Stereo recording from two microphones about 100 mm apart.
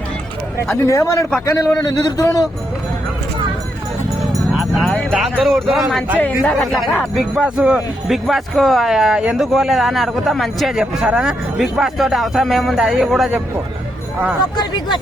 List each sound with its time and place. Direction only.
0.7 s a man's voice: 25° left (ahead or behind)
5.1 s speech: centre (ahead or behind)
6.1 s speech: 15° left (ahead or behind)
6.5 s speech: centre (ahead or behind)
14.5 s speech: 45° left (ahead or behind)